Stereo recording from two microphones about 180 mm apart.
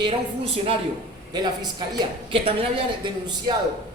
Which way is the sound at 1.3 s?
25° right (ahead or behind).